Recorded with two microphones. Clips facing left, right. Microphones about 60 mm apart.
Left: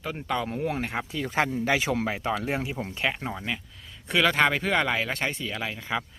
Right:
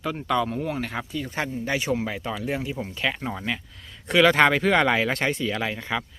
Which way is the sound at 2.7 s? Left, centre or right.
Left.